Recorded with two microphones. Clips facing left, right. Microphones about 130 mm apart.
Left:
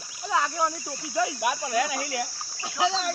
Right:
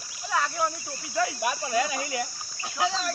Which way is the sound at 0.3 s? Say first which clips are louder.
Left 2 dB; 10° left (ahead or behind).